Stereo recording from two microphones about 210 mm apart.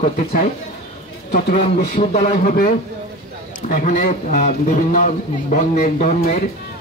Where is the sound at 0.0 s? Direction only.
35° left (ahead or behind).